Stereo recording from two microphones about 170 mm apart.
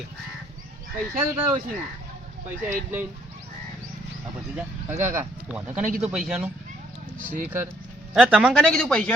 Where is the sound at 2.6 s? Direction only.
10° right (ahead or behind).